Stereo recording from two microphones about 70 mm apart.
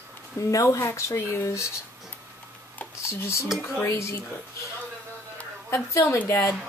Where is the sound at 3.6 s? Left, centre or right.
Left.